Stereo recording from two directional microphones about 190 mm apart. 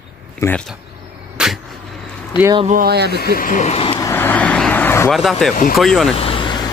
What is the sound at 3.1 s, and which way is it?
Speech, 50° left (ahead or behind).